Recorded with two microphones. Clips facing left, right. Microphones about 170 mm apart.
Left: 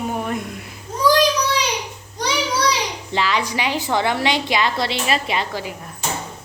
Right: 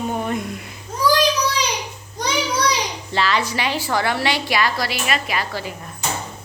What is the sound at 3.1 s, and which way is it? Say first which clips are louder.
A woman's voice: right 1 dB; 15° left (ahead or behind).